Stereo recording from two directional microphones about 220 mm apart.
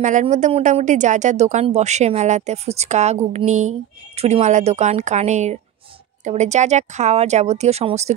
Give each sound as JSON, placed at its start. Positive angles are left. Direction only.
{"t": 0.0, "sound": "speech", "side_deg": -35}